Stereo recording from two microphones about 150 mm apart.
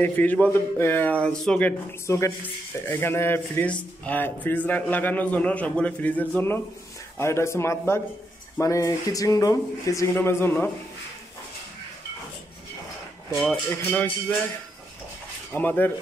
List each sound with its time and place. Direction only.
0.0 s a man's voice: 10° left (ahead or behind)
13.3 s a man's voice: centre (ahead or behind)
15.5 s a man's voice: 10° left (ahead or behind)